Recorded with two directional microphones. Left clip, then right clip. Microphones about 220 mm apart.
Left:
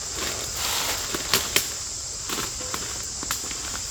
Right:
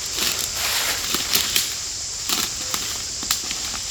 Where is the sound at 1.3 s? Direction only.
50° right (ahead or behind).